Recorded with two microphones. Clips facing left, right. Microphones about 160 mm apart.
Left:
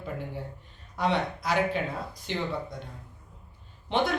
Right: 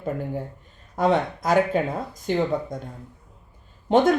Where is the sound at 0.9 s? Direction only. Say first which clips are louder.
Right 6 dB; 45° right (ahead or behind).